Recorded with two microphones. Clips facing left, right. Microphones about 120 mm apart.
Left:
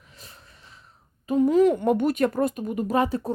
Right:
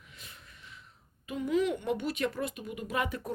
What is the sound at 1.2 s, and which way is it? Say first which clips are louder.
Speech: left 11 dB; 40° left (ahead or behind).